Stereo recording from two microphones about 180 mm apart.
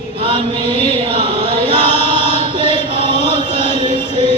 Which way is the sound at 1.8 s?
35° left (ahead or behind).